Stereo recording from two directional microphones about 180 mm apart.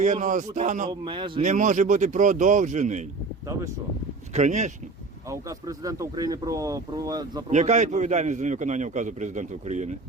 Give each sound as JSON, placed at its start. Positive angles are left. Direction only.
{"t": 0.0, "sound": "a man's voice", "side_deg": -40}
{"t": 0.9, "sound": "speech", "side_deg": -25}
{"t": 1.4, "sound": "speech", "side_deg": -45}
{"t": 3.4, "sound": "speech", "side_deg": -20}
{"t": 4.3, "sound": "speech", "side_deg": -40}
{"t": 5.3, "sound": "speech", "side_deg": -20}
{"t": 7.4, "sound": "a man's voice", "side_deg": -40}